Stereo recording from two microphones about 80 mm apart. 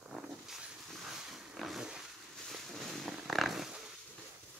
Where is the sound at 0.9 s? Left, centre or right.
Centre.